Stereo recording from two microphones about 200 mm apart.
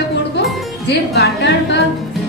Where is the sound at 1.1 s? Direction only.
55° left (ahead or behind).